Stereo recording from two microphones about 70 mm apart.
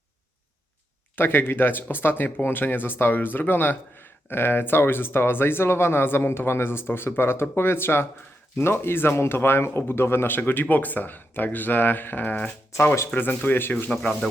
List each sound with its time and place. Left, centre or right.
1.1 s speech: left
13.9 s speech: centre